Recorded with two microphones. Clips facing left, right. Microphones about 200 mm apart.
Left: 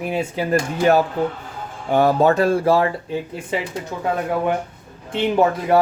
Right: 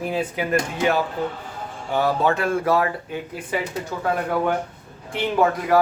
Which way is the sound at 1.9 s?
45° left (ahead or behind).